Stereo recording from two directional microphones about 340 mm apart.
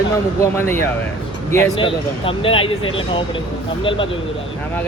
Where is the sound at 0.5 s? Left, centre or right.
Centre.